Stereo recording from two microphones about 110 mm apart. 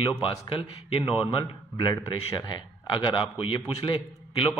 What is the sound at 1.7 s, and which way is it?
A man's voice, 40° left (ahead or behind).